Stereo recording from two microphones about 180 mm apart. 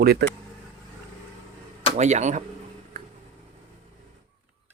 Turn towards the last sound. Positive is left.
turn(degrees=-50)  # may be behind; listen again after turning